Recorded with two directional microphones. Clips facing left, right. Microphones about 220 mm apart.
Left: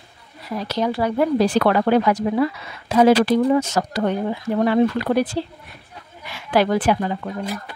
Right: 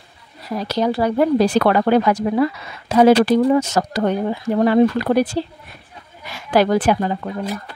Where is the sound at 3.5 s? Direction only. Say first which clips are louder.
Right 2 dB; 40° right (ahead or behind).